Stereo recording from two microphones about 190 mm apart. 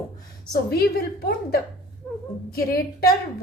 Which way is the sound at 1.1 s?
55° left (ahead or behind).